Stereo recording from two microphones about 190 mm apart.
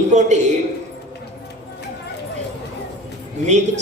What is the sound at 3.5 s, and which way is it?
Speech, 35° right (ahead or behind).